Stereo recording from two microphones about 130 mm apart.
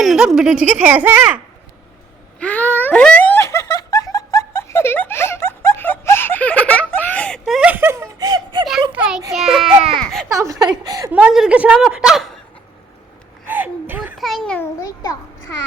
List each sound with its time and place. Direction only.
0.0 s a child's voice: centre (ahead or behind)
2.4 s giggle: 10° left (ahead or behind); by 8.6 s 30° right (ahead or behind)
8.9 s a sound: 5° right (ahead or behind)
9.3 s a child's voice: 5° right (ahead or behind)
9.8 s baby cry: 5° left (ahead or behind)
10.2 s a woman's voice: 25° right (ahead or behind)
11.1 s a child's voice: 5° right (ahead or behind)
13.5 s gasp: 15° right (ahead or behind)
14.2 s a child's voice: centre (ahead or behind)
14.8 s a child's voice: 25° left (ahead or behind)